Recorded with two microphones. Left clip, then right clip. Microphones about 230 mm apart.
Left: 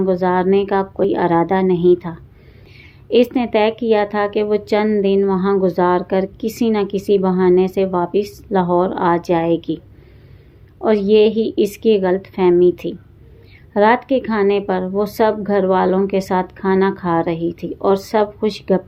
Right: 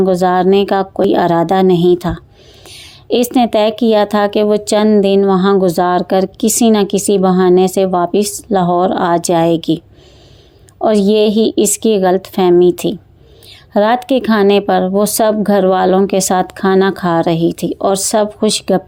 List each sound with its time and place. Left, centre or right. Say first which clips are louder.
0.0 s a woman's voice: right 5 dB; right